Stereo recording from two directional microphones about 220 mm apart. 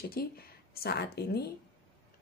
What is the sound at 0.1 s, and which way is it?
Speech, 45° left (ahead or behind).